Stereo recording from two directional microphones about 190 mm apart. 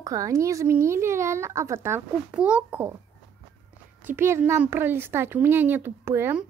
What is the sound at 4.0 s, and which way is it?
Speech, 10° right (ahead or behind).